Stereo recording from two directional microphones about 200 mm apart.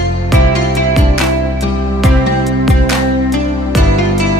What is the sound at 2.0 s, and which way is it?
Music, centre (ahead or behind).